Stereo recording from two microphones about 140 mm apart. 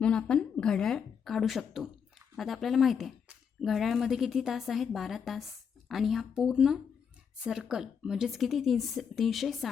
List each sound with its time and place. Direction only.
0.0 s speech: 5° left (ahead or behind)